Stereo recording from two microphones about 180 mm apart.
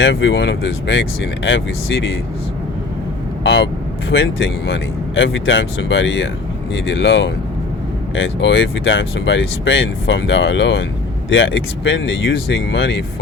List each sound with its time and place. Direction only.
0.0 s speech: 90° left
3.4 s speech: 80° left
4.1 s speech: 90° left